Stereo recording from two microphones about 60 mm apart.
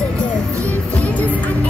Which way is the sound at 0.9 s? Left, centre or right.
Left.